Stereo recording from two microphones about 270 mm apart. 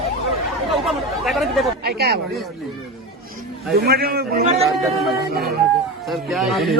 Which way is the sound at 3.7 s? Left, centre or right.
Right.